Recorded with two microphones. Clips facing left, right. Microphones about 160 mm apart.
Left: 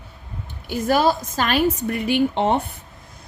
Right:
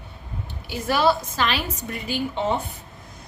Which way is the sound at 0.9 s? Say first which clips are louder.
Left 2 dB; 45° left (ahead or behind).